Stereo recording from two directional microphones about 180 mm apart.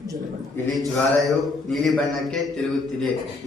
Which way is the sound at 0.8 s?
Centre (ahead or behind).